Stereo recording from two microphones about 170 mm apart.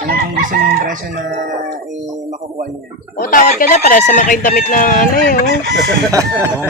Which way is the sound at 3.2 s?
55° left (ahead or behind).